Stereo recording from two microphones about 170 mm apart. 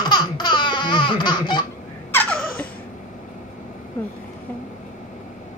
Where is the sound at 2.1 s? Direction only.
5° left (ahead or behind).